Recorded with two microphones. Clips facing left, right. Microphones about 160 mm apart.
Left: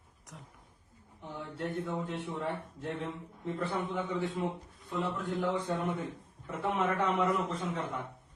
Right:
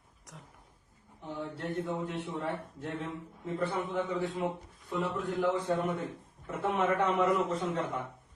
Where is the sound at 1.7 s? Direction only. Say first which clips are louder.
Right 2 dB; centre (ahead or behind).